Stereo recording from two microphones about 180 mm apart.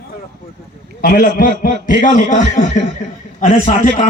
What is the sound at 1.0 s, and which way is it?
Speech, 55° left (ahead or behind).